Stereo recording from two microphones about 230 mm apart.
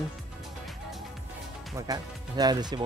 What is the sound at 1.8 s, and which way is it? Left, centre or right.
Speech, centre.